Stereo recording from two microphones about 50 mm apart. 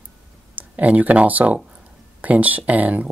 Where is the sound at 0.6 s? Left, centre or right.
Right.